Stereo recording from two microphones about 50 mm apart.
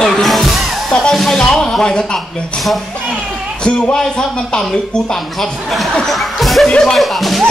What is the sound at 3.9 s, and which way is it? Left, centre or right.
Speech, centre.